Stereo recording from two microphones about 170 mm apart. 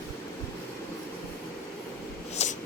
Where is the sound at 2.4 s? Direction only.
40° left (ahead or behind).